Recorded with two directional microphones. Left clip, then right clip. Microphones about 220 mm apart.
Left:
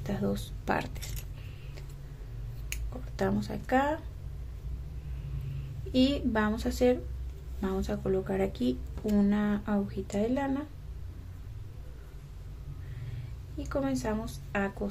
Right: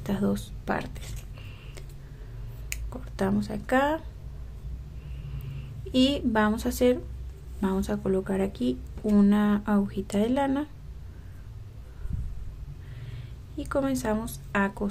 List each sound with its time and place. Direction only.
0.0 s a woman's voice: 15° right (ahead or behind)
0.7 s a woman's voice: 5° right (ahead or behind)
3.2 s a woman's voice: 10° right (ahead or behind)
5.9 s a woman's voice: 15° right (ahead or behind)
13.6 s speech: 20° right (ahead or behind)